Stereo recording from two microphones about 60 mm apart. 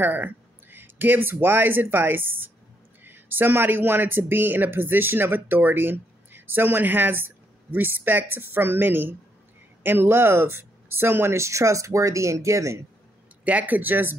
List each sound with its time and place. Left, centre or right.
0.0 s speech: right
13.4 s speech: right